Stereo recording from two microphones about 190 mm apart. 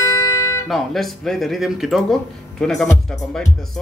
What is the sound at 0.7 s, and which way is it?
Speech, centre (ahead or behind).